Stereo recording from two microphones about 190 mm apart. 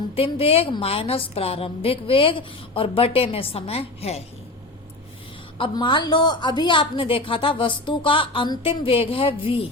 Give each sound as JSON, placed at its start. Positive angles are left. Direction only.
{"t": 0.2, "sound": "a woman's voice", "side_deg": 30}
{"t": 5.5, "sound": "a woman's voice", "side_deg": 25}